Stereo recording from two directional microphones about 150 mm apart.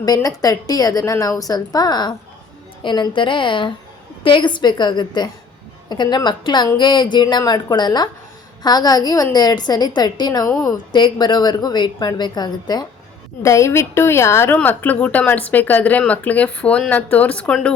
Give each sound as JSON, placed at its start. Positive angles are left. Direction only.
{"t": 0.0, "sound": "a woman's voice", "side_deg": 25}